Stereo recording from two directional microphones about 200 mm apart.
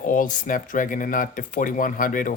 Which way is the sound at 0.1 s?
40° left (ahead or behind).